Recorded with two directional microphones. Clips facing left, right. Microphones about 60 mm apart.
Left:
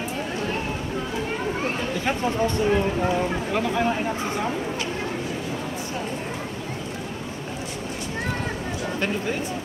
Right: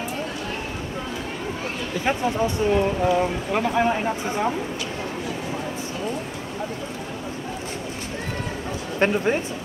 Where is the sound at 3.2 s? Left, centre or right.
Centre.